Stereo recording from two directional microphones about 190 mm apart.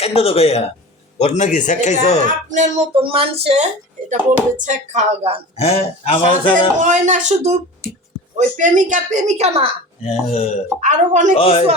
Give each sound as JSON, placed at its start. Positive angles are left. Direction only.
{"t": 0.0, "sound": "a man's voice", "side_deg": 30}
{"t": 2.2, "sound": "speech", "side_deg": -40}
{"t": 5.5, "sound": "a man's voice", "side_deg": 35}
{"t": 6.7, "sound": "speech", "side_deg": -40}
{"t": 10.0, "sound": "a man's voice", "side_deg": 35}
{"t": 10.8, "sound": "speech", "side_deg": -40}
{"t": 11.3, "sound": "a man's voice", "side_deg": 30}